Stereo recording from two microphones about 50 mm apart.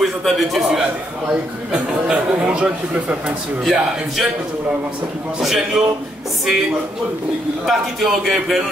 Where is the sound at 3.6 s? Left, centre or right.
Centre.